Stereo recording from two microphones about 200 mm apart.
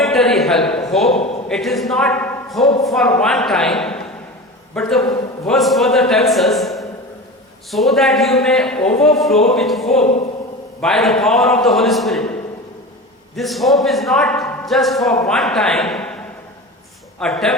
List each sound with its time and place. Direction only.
0.0 s a sound: centre (ahead or behind)
1.5 s a man's voice: centre (ahead or behind)
10.0 s speech: 35° left (ahead or behind)
10.8 s a man's voice: centre (ahead or behind)
13.3 s a man's voice: centre (ahead or behind)
17.2 s a man's voice: centre (ahead or behind)